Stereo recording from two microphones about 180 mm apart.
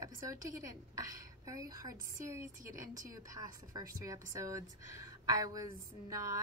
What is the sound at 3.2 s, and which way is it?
A woman's voice, 20° right (ahead or behind).